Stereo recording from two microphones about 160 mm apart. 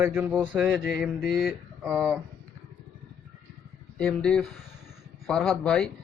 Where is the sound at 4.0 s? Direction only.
5° left (ahead or behind).